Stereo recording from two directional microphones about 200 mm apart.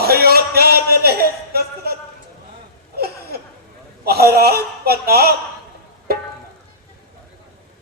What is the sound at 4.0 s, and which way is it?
A man's voice, 50° right (ahead or behind).